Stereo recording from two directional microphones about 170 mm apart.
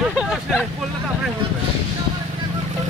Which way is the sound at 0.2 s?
5° right (ahead or behind).